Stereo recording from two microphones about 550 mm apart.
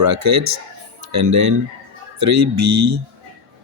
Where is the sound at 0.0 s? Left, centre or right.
Right.